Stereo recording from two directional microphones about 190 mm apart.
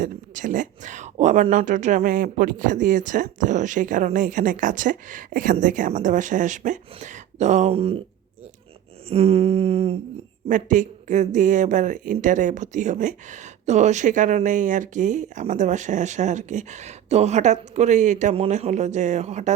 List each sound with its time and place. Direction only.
0.0 s speech: 40° right (ahead or behind)
9.0 s speech: 30° right (ahead or behind)
10.5 s speech: 40° right (ahead or behind)